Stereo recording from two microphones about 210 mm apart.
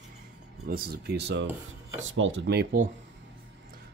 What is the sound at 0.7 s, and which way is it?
Speech, 50° right (ahead or behind).